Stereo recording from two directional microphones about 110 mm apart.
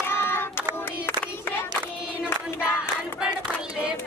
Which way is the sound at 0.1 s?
20° left (ahead or behind).